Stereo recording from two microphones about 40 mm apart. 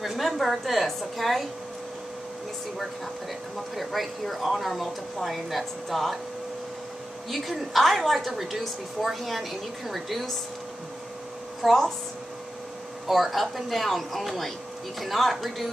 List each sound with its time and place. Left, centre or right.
0.0 s a woman's voice: centre
3.7 s a woman's voice: centre
7.2 s a woman's voice: centre
11.6 s a woman's voice: centre
13.0 s a woman's voice: centre